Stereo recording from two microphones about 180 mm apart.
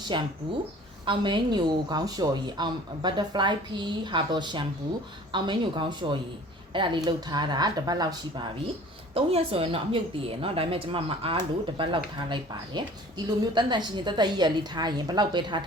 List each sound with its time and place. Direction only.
0.1 s a woman's voice: 25° right (ahead or behind)